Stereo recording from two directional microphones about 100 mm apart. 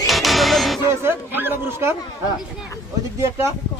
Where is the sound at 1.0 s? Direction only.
20° right (ahead or behind).